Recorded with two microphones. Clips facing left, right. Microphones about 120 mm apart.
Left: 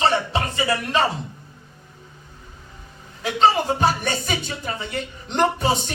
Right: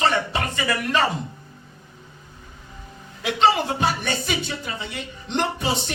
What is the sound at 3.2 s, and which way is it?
Speech, 40° left (ahead or behind).